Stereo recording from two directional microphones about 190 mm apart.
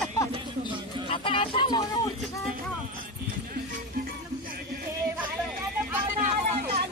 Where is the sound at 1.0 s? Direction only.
25° left (ahead or behind).